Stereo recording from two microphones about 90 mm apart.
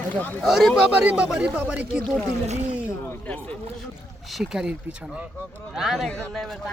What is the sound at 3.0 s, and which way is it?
Speech, 15° left (ahead or behind).